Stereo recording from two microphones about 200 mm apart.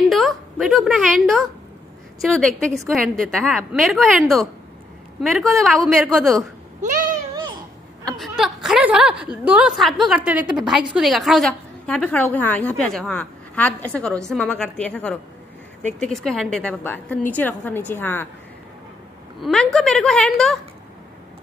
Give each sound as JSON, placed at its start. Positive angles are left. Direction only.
{"t": 0.1, "sound": "a sound", "side_deg": 0}
{"t": 2.2, "sound": "a woman's voice", "side_deg": 5}
{"t": 6.8, "sound": "cat", "side_deg": -40}
{"t": 8.2, "sound": "a woman's voice", "side_deg": 0}
{"t": 19.4, "sound": "a woman's voice", "side_deg": 5}